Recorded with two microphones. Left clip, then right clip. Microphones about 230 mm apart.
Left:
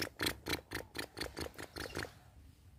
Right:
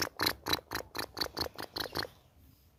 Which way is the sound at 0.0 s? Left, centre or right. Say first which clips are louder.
Right 6 dB; centre.